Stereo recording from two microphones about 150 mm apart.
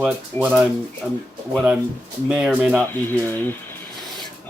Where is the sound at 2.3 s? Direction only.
5° right (ahead or behind).